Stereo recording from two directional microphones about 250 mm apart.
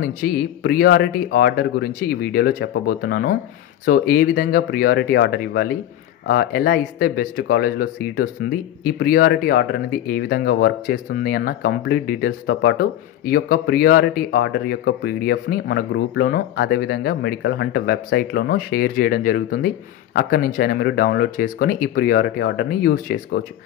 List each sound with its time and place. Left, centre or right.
0.0 s speech: left